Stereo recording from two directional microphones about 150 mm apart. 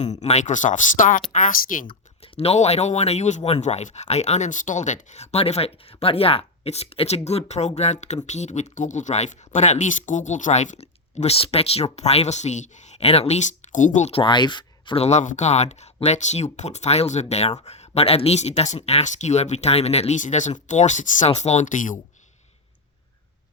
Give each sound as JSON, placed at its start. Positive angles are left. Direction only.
{"t": 0.0, "sound": "speech", "side_deg": 50}
{"t": 1.9, "sound": "speech", "side_deg": 40}
{"t": 14.1, "sound": "speech", "side_deg": 35}